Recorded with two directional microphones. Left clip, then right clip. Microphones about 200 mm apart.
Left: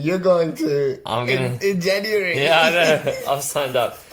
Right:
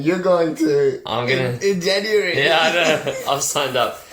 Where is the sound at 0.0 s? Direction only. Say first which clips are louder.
Right 1 dB; 45° left (ahead or behind).